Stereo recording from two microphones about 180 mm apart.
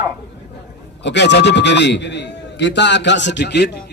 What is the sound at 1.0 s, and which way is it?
A man's voice, 75° left (ahead or behind).